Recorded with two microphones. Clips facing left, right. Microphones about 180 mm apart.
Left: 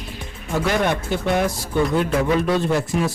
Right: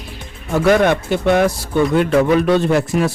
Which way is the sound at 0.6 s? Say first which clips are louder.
Right 8 dB; 65° right (ahead or behind).